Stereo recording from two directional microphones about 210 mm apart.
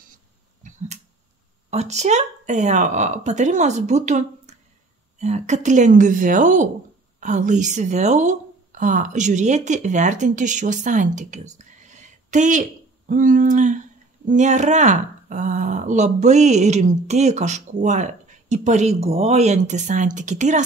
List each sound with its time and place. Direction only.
0.6 s finger snapping: 35° right (ahead or behind)
1.7 s speech: 30° right (ahead or behind)